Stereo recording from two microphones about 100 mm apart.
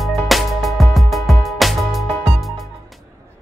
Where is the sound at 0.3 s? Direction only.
Centre (ahead or behind).